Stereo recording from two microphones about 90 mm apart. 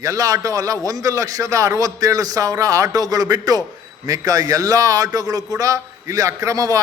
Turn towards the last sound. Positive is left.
turn(degrees=-40)  # may be behind; listen again after turning